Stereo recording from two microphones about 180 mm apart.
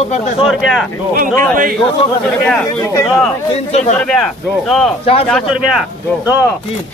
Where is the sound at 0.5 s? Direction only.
Centre (ahead or behind).